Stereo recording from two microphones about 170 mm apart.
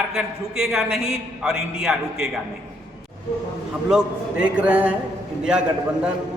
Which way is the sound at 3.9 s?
5° right (ahead or behind).